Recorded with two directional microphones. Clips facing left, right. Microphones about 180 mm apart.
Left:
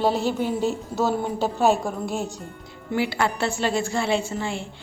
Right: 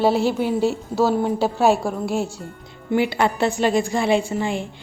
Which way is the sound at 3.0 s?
20° right (ahead or behind).